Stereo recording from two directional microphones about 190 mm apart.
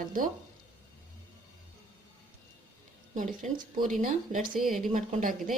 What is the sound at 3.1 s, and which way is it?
Speech, 45° right (ahead or behind).